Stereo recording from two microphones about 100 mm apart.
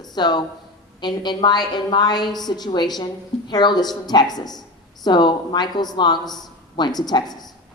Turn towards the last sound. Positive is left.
turn(degrees=45)  # may be behind; listen again after turning